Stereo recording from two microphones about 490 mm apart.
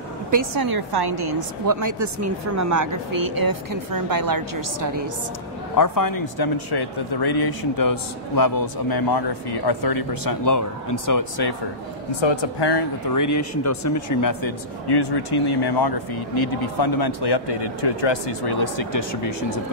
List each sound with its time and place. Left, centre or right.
0.3 s a woman's voice: right
5.8 s speech: left
12.2 s speech: left
13.1 s speech: left